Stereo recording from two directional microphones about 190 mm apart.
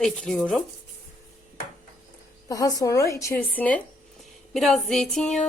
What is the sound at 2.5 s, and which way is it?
A woman's voice, 20° left (ahead or behind).